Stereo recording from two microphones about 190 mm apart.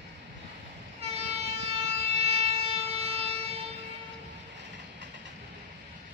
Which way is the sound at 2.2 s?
30° right (ahead or behind).